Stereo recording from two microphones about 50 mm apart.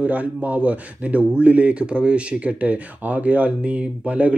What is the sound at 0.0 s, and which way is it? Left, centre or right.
Speech, right.